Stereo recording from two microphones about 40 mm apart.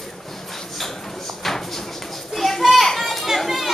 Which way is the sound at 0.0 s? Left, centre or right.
Centre.